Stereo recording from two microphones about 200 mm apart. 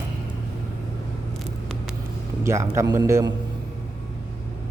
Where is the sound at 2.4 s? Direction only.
15° right (ahead or behind).